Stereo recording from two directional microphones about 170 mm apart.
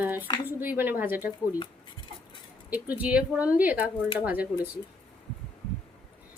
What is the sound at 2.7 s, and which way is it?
Speech, 10° right (ahead or behind).